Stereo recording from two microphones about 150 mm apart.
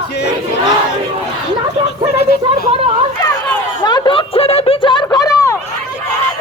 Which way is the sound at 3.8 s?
30° left (ahead or behind).